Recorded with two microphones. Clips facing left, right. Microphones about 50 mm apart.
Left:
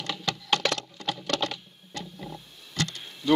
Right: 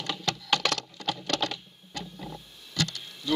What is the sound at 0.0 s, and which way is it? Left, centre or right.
Patter, centre.